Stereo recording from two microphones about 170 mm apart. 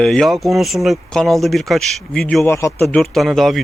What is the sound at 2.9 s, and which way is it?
Speech, centre (ahead or behind).